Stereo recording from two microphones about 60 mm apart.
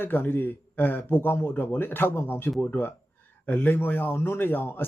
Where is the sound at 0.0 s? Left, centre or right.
Left.